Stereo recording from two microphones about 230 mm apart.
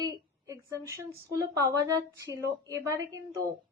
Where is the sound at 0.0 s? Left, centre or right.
Centre.